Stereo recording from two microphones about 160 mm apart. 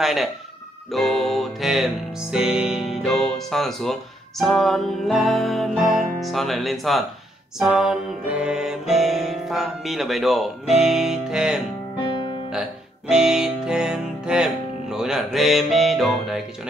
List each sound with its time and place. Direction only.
0.0 s music: centre (ahead or behind)
13.1 s music: 5° right (ahead or behind)